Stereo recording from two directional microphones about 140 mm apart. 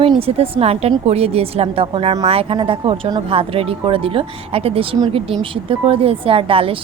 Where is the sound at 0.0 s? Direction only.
45° right (ahead or behind).